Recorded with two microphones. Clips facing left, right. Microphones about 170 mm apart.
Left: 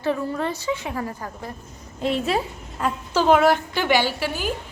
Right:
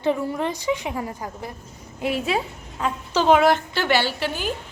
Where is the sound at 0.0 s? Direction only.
15° right (ahead or behind); by 4.5 s 10° left (ahead or behind).